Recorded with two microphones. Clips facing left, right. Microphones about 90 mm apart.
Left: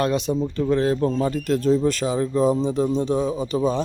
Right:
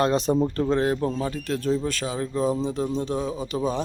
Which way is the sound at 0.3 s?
50° right (ahead or behind).